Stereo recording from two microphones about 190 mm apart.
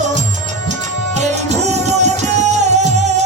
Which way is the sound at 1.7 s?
35° right (ahead or behind).